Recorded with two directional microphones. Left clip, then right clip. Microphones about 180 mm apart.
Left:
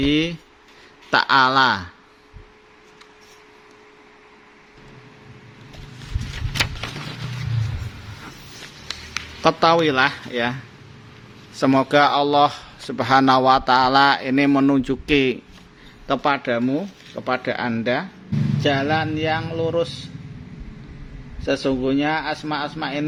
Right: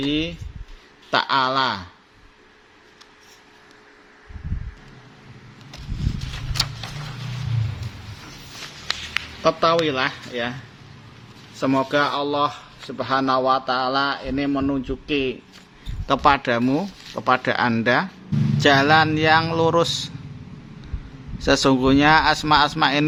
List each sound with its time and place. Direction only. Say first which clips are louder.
0.0 s speech: left 4 dB; 30° left (ahead or behind)
9.4 s speech: left 2 dB; 25° left (ahead or behind)
11.6 s speech: left 4 dB; 25° left (ahead or behind)
16.0 s speech: right 3 dB; 5° right (ahead or behind)
18.6 s speech: right 6 dB; 25° right (ahead or behind)
21.4 s speech: right 4 dB; 30° right (ahead or behind)